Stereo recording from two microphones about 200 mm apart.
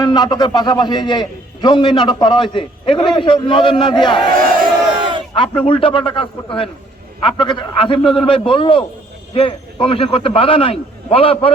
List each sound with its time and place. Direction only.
0.0 s a man's voice: 20° left (ahead or behind)
4.3 s a sound: 45° right (ahead or behind)
5.3 s a man's voice: 25° left (ahead or behind)